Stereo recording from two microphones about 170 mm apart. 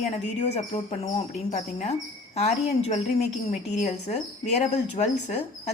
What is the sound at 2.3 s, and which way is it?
A woman's voice, 40° left (ahead or behind).